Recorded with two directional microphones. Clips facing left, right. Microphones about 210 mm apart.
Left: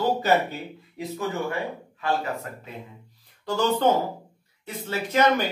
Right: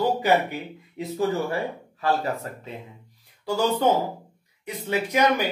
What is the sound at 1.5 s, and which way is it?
Speech, 35° right (ahead or behind).